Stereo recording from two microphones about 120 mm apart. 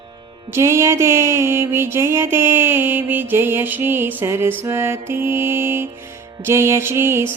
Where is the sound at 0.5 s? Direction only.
20° right (ahead or behind).